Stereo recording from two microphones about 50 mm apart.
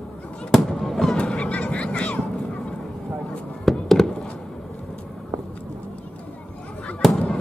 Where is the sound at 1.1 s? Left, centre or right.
Centre.